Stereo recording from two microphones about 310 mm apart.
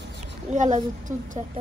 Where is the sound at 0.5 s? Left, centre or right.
Right.